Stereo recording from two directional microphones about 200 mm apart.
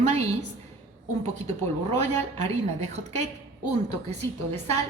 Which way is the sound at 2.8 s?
35° right (ahead or behind).